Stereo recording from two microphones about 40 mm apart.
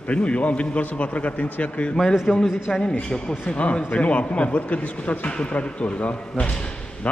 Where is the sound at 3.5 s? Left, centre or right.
Left.